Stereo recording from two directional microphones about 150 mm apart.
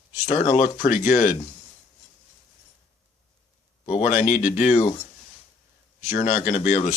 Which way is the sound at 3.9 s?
55° left (ahead or behind).